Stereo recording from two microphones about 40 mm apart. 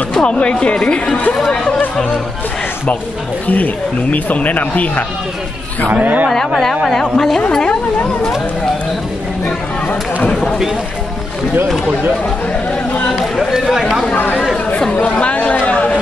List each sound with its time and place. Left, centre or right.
0.1 s speech: left
3.4 s speech: left
6.6 s a woman's voice: centre
13.1 s chatter: centre
13.5 s chatter: centre
14.1 s speech: left
15.0 s speech: left
15.6 s chatter: left